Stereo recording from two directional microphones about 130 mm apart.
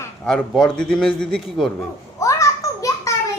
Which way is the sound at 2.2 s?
25° left (ahead or behind).